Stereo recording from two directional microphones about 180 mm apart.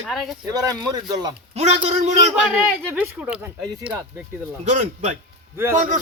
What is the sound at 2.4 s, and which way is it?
Speech, 10° right (ahead or behind).